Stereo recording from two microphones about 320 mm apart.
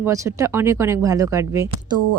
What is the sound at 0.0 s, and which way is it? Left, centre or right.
Speech, centre.